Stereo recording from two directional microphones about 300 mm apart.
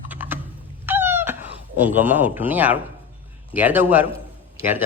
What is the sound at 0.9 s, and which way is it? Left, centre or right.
Cat, centre.